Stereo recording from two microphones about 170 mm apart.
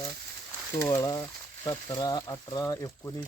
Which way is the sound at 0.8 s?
20° left (ahead or behind).